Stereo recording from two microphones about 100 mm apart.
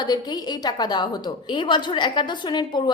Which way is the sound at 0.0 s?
40° left (ahead or behind).